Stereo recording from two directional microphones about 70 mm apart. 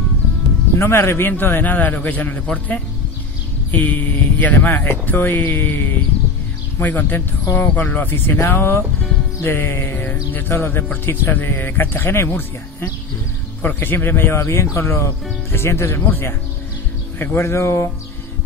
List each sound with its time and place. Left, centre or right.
0.7 s speech: left